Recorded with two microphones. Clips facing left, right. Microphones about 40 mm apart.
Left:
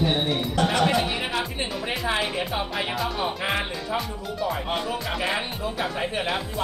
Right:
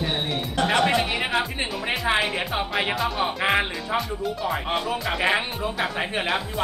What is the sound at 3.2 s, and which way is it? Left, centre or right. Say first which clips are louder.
Speech: right 4 dB; right.